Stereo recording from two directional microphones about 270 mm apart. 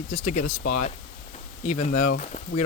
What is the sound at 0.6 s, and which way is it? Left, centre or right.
Speech, left.